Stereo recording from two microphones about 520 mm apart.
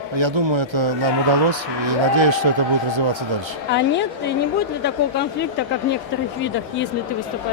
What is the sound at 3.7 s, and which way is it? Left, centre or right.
Speech, centre.